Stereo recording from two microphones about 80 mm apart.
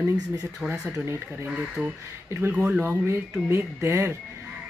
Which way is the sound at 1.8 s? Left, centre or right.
Centre.